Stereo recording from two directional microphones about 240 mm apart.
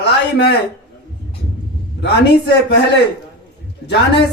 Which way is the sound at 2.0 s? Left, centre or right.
Left.